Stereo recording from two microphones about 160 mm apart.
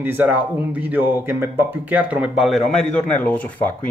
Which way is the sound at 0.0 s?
10° right (ahead or behind).